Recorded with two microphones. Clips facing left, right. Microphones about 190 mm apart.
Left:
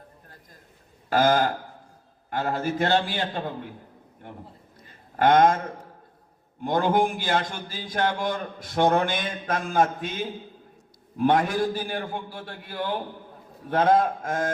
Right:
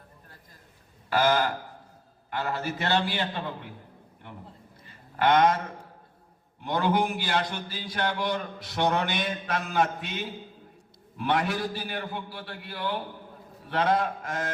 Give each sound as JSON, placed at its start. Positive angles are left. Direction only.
{"t": 1.1, "sound": "a man's voice", "side_deg": 45}
{"t": 4.9, "sound": "a man's voice", "side_deg": 45}